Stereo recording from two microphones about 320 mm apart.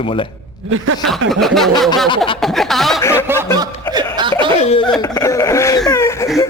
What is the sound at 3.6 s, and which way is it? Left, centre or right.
Chuckle, centre.